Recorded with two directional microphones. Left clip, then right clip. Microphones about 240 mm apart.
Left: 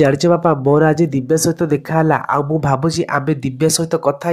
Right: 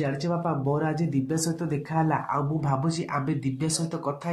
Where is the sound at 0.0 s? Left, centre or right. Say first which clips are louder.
Left 16 dB; left.